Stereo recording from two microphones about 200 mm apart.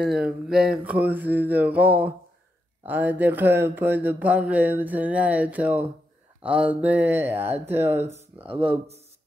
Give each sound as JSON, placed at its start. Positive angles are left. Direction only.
{"t": 0.0, "sound": "speech", "side_deg": -5}
{"t": 8.5, "sound": "speech", "side_deg": -25}